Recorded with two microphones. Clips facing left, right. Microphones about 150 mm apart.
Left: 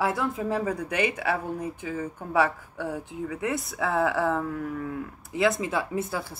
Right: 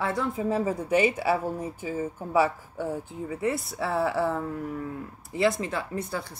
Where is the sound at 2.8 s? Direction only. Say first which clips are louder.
Even; 30° right (ahead or behind).